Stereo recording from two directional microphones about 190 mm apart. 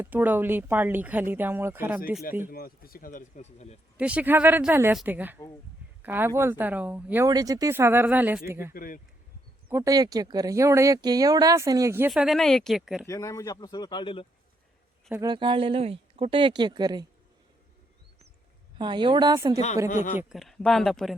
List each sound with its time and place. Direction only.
0.0 s speech: 10° right (ahead or behind)
2.5 s speech: 50° left (ahead or behind); by 3.8 s 35° left (ahead or behind)
3.9 s speech: 5° right (ahead or behind)
8.7 s speech: 50° left (ahead or behind)
9.6 s speech: 15° right (ahead or behind)
12.1 s speech: centre (ahead or behind)
13.1 s speech: 15° left (ahead or behind)
15.1 s speech: 20° right (ahead or behind)
18.8 s speech: 25° right (ahead or behind)
19.9 s speech: 45° left (ahead or behind)
20.3 s speech: centre (ahead or behind)